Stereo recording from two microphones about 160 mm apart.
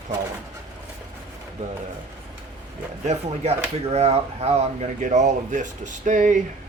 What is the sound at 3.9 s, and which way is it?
Speech, 40° right (ahead or behind).